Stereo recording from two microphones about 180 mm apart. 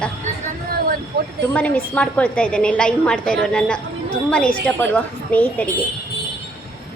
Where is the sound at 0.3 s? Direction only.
40° right (ahead or behind).